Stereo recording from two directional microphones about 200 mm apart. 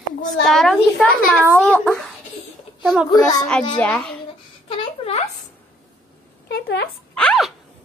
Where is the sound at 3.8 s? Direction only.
5° left (ahead or behind).